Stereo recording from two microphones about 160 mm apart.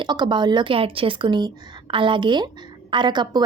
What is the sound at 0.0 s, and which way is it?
A woman's voice, 30° right (ahead or behind).